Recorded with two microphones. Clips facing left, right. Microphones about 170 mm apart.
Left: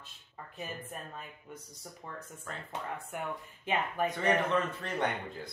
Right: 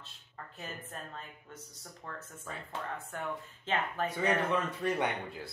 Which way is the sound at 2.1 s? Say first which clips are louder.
Even; 15° left (ahead or behind).